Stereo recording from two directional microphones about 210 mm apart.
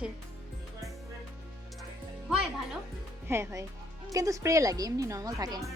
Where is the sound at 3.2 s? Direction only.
10° right (ahead or behind).